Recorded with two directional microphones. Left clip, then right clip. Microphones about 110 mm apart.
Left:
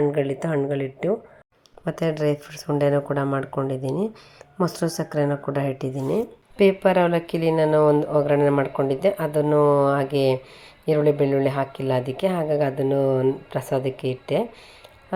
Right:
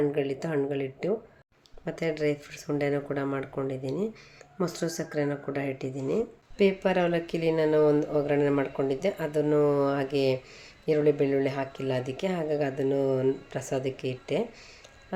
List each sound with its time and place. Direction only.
0.0 s speech: 30° left (ahead or behind)
1.8 s speech: 55° left (ahead or behind)
3.8 s speech: 50° left (ahead or behind)
6.1 s speech: 35° left (ahead or behind)